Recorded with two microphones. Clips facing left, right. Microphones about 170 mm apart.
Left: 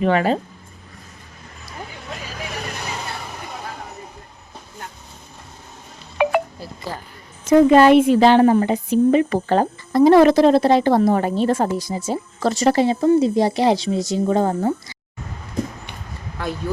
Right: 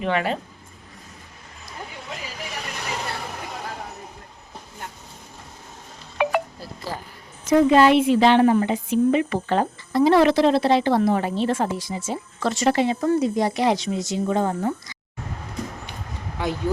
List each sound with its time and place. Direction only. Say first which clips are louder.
0.0 s a woman's voice: left 6 dB; 40° left (ahead or behind)
6.1 s wind chime: left 4 dB; centre (ahead or behind)
7.4 s a woman's voice: left 4 dB; 50° left (ahead or behind)